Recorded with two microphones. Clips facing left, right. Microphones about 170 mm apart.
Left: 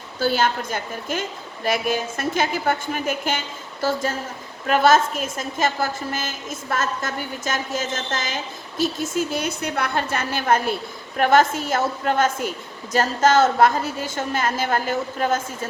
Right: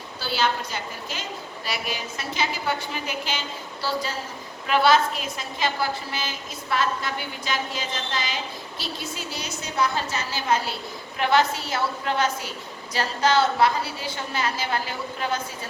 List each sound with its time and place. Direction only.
0.2 s a woman's voice: 50° left (ahead or behind)